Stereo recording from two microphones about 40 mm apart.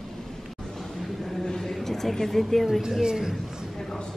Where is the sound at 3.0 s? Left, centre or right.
Centre.